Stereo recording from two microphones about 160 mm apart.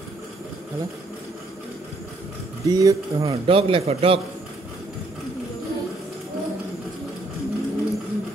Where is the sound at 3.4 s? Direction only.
35° right (ahead or behind).